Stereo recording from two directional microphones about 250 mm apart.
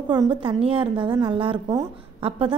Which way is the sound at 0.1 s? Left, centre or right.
Centre.